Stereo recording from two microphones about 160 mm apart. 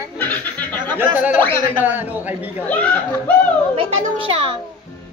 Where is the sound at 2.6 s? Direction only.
10° left (ahead or behind).